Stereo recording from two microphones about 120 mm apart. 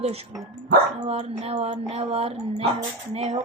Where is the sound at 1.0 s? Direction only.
60° right (ahead or behind).